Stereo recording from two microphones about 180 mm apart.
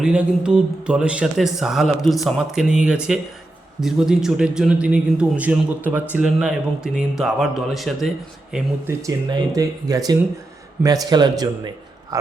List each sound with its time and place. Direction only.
0.0 s a man's voice: 5° right (ahead or behind)
9.0 s speech: 20° right (ahead or behind)